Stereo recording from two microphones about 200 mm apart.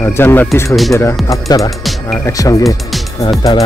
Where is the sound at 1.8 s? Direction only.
Centre (ahead or behind).